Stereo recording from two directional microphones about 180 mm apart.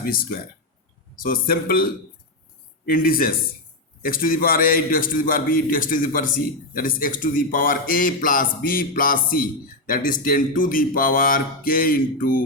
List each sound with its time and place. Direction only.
0.0 s a man's voice: 55° left (ahead or behind)